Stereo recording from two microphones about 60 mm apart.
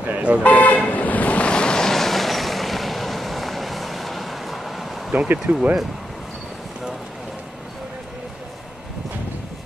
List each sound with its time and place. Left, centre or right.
0.0 s speech: right
0.4 s toot: left; by 4.8 s centre
5.1 s speech: right
5.5 s speech: centre